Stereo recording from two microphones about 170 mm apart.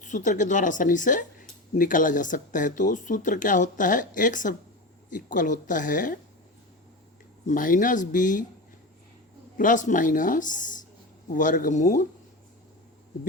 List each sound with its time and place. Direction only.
0.0 s speech: 45° left (ahead or behind)
7.4 s speech: 50° left (ahead or behind)
9.6 s speech: 50° left (ahead or behind)